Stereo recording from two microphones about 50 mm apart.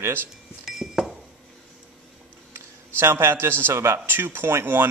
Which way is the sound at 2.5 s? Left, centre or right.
Right.